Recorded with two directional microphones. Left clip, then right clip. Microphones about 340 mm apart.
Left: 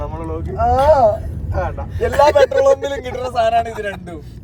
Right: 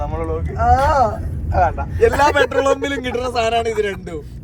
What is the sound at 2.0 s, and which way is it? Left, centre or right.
A man's voice, centre.